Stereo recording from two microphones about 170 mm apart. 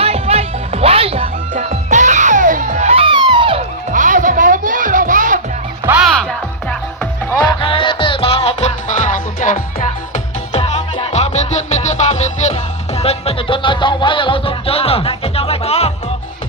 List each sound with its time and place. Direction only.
0.0 s music: 35° right (ahead or behind)
1.5 s music: 45° right (ahead or behind); by 3.6 s 30° right (ahead or behind)
3.9 s music: 50° right (ahead or behind)
5.8 s music: 10° right (ahead or behind)
6.1 s music: 5° left (ahead or behind)
7.3 s music: 30° left (ahead or behind); by 9.6 s 50° left (ahead or behind)
10.5 s music: 30° left (ahead or behind)